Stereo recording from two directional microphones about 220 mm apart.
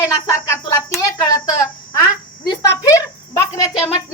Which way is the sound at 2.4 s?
15° left (ahead or behind).